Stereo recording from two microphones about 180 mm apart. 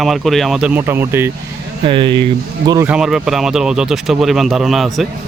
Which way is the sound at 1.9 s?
30° right (ahead or behind).